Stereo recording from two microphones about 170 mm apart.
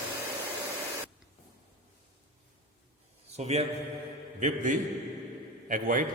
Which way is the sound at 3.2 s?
40° right (ahead or behind).